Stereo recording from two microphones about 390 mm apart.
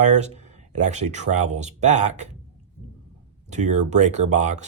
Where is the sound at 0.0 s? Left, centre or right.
Centre.